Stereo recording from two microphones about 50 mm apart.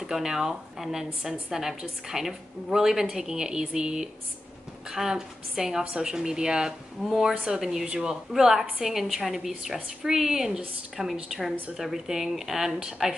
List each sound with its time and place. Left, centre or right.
0.0 s a woman's voice: centre